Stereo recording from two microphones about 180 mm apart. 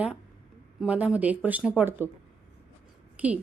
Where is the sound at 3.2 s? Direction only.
10° right (ahead or behind).